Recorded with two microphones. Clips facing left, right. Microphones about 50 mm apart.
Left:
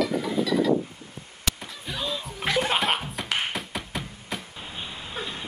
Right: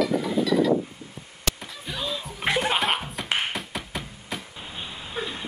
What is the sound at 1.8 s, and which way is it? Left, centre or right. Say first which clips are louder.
Music: even; centre.